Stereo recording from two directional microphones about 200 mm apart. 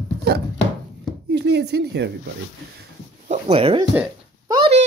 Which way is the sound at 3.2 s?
35° right (ahead or behind).